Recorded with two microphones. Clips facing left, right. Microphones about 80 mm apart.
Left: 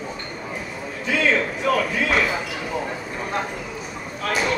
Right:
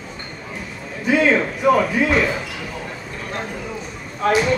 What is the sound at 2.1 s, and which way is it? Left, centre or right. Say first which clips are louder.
Basketball bounce: right 3 dB; centre.